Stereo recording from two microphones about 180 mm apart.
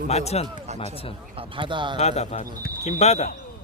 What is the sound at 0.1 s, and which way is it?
Speech, 35° left (ahead or behind).